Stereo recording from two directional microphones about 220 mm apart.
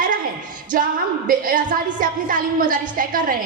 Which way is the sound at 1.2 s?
40° right (ahead or behind).